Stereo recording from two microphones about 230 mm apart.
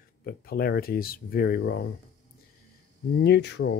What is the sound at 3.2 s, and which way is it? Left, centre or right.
Speech, left.